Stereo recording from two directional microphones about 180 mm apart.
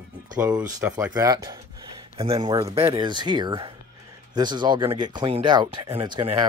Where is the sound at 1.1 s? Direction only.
20° right (ahead or behind).